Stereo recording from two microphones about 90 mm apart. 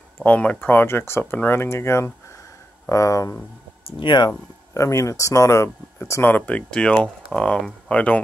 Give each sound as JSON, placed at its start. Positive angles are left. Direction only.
{"t": 0.2, "sound": "speech", "side_deg": 15}
{"t": 4.0, "sound": "speech", "side_deg": 60}
{"t": 4.7, "sound": "speech", "side_deg": 35}
{"t": 6.3, "sound": "speech", "side_deg": 15}